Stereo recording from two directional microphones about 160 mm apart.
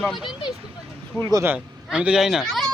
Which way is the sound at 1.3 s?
10° right (ahead or behind).